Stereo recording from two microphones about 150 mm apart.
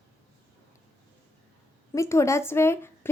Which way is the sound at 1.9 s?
20° left (ahead or behind).